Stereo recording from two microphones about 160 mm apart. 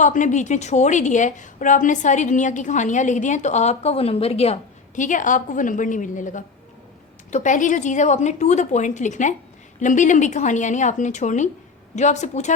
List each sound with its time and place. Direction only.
0.0 s a woman's voice: 50° left (ahead or behind)